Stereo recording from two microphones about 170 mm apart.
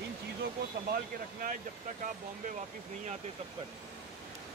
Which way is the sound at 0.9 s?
55° right (ahead or behind).